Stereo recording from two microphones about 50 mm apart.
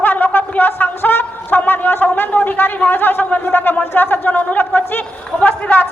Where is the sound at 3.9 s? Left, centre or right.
Left.